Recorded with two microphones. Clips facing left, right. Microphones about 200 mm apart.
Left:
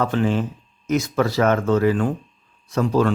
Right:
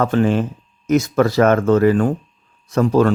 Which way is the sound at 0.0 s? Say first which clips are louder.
Right 4 dB; 50° right (ahead or behind).